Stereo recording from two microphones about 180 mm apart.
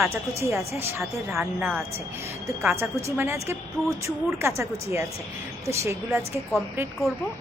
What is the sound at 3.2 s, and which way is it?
A woman's voice, 15° right (ahead or behind).